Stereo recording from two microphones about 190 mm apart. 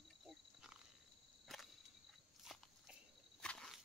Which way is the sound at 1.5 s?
Centre (ahead or behind).